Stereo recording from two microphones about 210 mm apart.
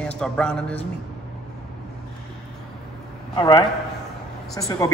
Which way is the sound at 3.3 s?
20° left (ahead or behind).